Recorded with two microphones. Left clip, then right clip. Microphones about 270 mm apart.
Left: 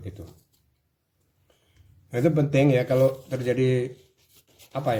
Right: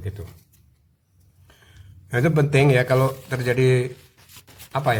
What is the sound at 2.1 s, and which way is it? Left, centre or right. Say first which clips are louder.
A man's voice: right 3 dB; right.